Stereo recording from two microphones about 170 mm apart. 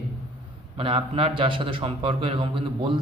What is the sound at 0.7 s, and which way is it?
A man's voice, 30° right (ahead or behind).